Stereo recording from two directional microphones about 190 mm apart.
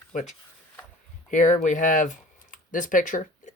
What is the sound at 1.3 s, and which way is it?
Speech, 40° left (ahead or behind).